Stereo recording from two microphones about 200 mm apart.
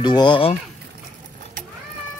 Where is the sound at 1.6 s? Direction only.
40° right (ahead or behind).